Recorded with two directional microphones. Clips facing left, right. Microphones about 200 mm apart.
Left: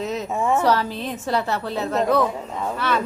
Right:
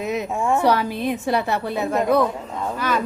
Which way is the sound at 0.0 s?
15° right (ahead or behind).